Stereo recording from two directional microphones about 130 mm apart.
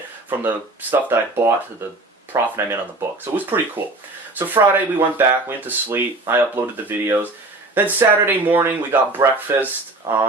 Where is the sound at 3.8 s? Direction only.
15° right (ahead or behind).